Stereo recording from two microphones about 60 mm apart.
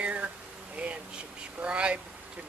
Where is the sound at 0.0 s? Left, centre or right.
Right.